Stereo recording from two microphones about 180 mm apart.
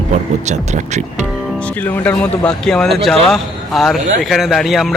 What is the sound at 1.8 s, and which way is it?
A man's voice, 10° left (ahead or behind).